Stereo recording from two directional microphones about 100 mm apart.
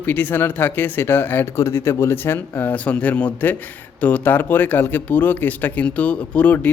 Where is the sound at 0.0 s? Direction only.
20° left (ahead or behind).